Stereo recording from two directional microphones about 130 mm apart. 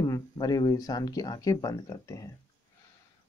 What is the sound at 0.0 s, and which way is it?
Speech, 30° left (ahead or behind).